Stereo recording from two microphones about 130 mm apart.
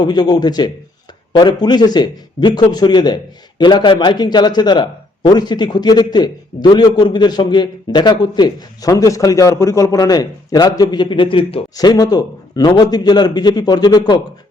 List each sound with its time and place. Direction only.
0.0 s a man's voice: 30° left (ahead or behind)
11.8 s a man's voice: 30° left (ahead or behind)